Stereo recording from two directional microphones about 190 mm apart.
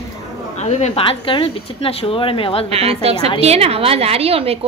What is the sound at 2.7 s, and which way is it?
A woman's voice, 30° right (ahead or behind).